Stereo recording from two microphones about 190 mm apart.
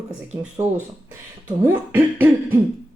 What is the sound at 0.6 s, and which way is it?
Speech, 10° right (ahead or behind).